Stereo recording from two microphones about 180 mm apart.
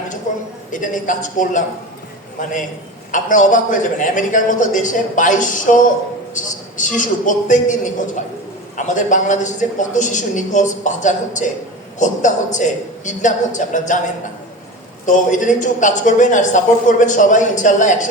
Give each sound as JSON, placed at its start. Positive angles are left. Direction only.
{"t": 0.7, "sound": "a woman's voice", "side_deg": 45}
{"t": 3.1, "sound": "a woman's voice", "side_deg": 45}
{"t": 15.0, "sound": "a woman's voice", "side_deg": 45}